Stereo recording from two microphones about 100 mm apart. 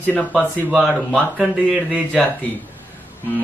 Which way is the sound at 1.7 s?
15° right (ahead or behind).